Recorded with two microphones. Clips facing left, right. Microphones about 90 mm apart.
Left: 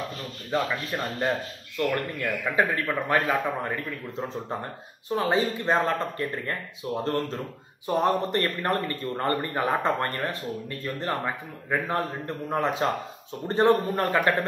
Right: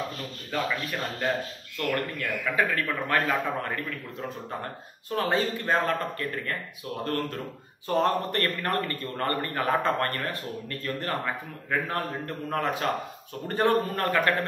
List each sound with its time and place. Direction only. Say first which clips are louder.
0.5 s a man's voice: left 3 dB; 15° left (ahead or behind)
5.1 s a man's voice: left 2 dB; 15° left (ahead or behind)